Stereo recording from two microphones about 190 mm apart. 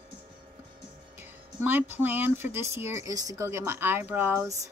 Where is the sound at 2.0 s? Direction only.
10° right (ahead or behind).